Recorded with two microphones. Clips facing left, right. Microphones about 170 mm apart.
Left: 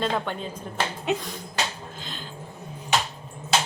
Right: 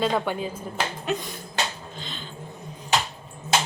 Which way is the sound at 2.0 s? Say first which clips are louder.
Right 1 dB; 5° left (ahead or behind).